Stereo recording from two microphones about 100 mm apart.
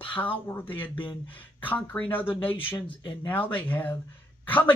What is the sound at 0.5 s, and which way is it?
Speech, 20° left (ahead or behind).